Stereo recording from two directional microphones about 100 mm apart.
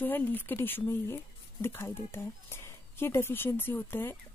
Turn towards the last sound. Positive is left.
turn(degrees=20)  # may be behind; listen again after turning